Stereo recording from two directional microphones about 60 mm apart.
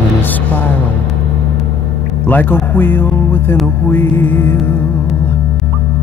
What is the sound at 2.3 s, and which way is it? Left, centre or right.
Music, left.